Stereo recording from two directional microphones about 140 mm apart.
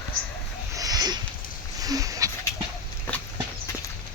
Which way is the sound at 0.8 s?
25° right (ahead or behind).